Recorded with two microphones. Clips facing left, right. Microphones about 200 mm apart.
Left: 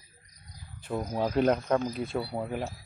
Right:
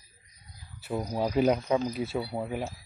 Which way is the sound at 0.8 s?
5° right (ahead or behind).